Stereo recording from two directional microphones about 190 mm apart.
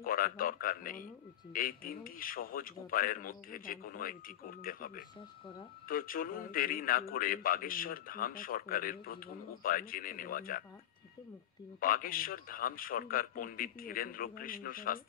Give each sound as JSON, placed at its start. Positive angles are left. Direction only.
{"t": 0.0, "sound": "a man's voice", "side_deg": 50}
{"t": 11.8, "sound": "a man's voice", "side_deg": 50}